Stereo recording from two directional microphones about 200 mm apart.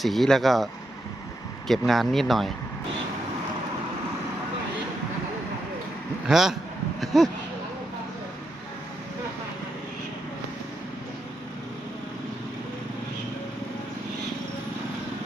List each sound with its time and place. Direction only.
0.0 s speech: centre (ahead or behind)
6.2 s speech: centre (ahead or behind)